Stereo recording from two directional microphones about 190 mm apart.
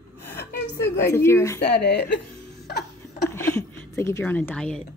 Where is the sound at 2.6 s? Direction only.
60° left (ahead or behind).